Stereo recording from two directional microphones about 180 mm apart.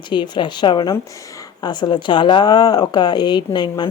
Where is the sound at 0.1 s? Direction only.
25° left (ahead or behind).